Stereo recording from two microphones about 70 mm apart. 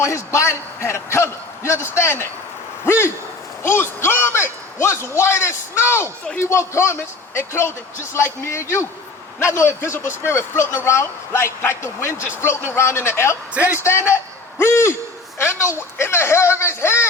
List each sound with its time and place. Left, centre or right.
0.0 s speech: left
13.5 s a man's voice: right
13.8 s speech: left